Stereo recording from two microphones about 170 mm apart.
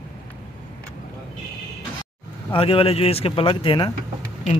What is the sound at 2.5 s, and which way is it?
Speech, 35° left (ahead or behind).